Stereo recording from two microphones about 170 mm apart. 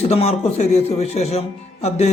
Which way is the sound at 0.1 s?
35° left (ahead or behind).